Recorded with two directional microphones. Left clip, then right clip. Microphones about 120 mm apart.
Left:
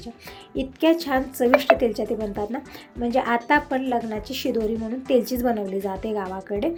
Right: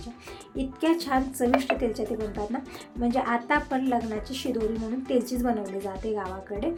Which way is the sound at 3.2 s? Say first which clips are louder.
Left 5 dB; 20° left (ahead or behind).